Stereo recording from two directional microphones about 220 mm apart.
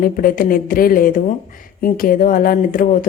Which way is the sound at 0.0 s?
40° left (ahead or behind).